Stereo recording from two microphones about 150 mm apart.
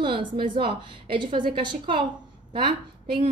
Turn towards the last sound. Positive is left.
turn(degrees=-35)  # may be behind; listen again after turning